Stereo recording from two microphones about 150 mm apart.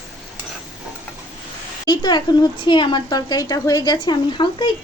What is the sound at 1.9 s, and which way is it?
A woman's voice, 30° left (ahead or behind).